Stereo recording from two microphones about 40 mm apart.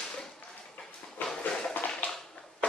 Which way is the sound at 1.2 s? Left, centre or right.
Left.